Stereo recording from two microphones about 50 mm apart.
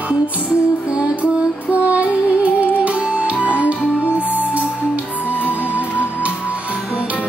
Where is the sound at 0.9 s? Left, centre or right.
Right.